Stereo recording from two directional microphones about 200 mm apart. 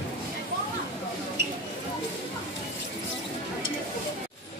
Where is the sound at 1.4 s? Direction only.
55° right (ahead or behind).